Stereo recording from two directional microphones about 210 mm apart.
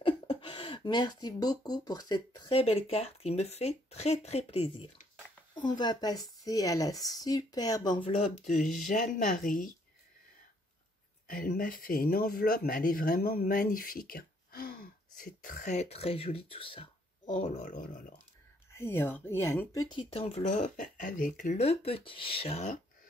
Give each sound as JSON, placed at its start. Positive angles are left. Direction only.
{"t": 0.0, "sound": "speech", "side_deg": 25}
{"t": 8.5, "sound": "speech", "side_deg": 40}
{"t": 11.2, "sound": "speech", "side_deg": 40}
{"t": 17.3, "sound": "speech", "side_deg": 40}
{"t": 18.8, "sound": "speech", "side_deg": 10}